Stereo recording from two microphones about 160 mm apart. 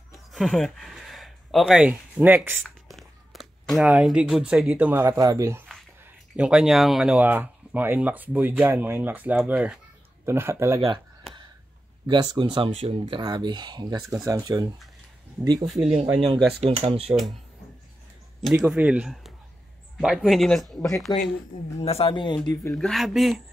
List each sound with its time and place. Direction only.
0.1 s speech: centre (ahead or behind)
2.6 s a sound: centre (ahead or behind)
3.9 s speech: 5° right (ahead or behind)
5.0 s speech: 20° right (ahead or behind)
6.3 s speech: 5° right (ahead or behind)
12.1 s speech: 30° right (ahead or behind)
15.6 s speech: centre (ahead or behind)
16.5 s speech: 40° right (ahead or behind)
18.4 s speech: 5° right (ahead or behind)
21.8 s speech: 35° left (ahead or behind); by 22.8 s 20° left (ahead or behind)
22.8 s speech: centre (ahead or behind)